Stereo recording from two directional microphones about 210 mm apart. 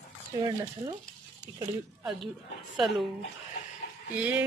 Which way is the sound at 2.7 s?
Centre (ahead or behind).